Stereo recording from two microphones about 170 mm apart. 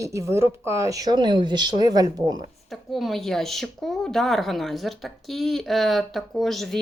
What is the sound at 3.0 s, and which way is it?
Speech, centre (ahead or behind).